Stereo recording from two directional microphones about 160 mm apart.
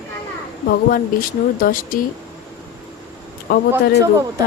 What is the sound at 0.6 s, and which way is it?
Speech, 60° left (ahead or behind).